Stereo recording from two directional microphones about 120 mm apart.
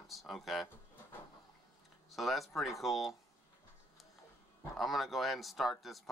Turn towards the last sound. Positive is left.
turn(degrees=0)  # may be behind; listen again after turning